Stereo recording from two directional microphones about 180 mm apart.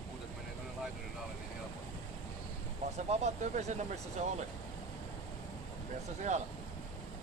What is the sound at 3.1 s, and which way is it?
Speech, 40° right (ahead or behind).